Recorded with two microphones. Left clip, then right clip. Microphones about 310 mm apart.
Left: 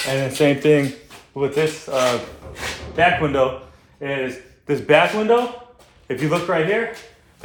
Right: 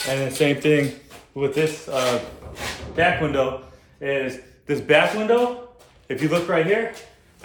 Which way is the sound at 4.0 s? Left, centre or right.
Centre.